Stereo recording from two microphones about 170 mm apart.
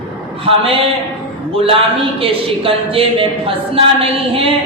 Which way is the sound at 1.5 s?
35° right (ahead or behind).